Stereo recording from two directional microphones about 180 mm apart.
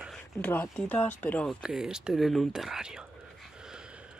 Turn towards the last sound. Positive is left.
turn(degrees=-5)  # may be behind; listen again after turning